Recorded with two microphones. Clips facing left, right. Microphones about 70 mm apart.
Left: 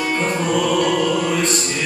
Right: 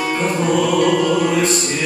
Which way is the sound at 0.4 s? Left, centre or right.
Centre.